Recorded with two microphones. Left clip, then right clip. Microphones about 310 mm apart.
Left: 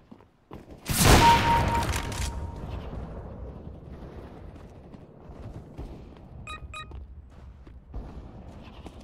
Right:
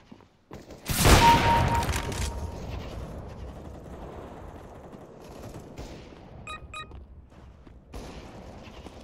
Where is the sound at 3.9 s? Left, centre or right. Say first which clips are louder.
Right 4 dB; centre.